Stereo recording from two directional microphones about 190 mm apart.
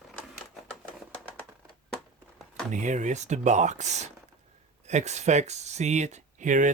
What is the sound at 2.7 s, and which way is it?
Speech, 40° right (ahead or behind).